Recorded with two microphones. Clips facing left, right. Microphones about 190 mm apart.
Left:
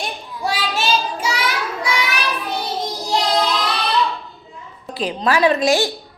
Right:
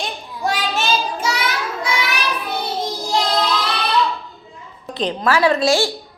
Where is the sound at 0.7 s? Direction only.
10° left (ahead or behind).